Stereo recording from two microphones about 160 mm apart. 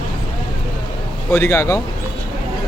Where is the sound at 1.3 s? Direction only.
15° left (ahead or behind).